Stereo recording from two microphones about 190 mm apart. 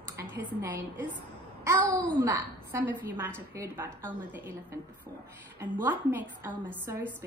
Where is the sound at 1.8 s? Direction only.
5° left (ahead or behind).